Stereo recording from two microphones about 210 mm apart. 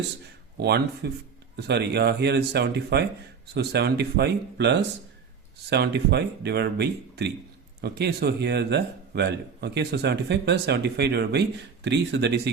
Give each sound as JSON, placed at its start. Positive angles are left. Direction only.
{"t": 0.6, "sound": "a man's voice", "side_deg": -50}